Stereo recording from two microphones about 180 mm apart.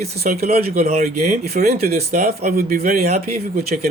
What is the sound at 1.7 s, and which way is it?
Speech, 50° right (ahead or behind).